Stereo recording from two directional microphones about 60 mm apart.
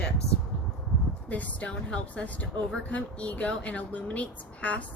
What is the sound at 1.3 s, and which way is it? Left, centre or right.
Speech, left.